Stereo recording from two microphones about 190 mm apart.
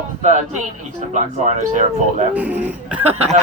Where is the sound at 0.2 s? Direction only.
40° right (ahead or behind).